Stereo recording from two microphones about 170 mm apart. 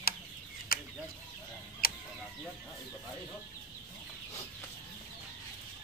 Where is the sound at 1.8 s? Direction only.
60° left (ahead or behind).